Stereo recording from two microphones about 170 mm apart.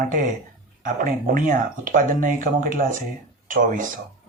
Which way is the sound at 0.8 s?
55° right (ahead or behind).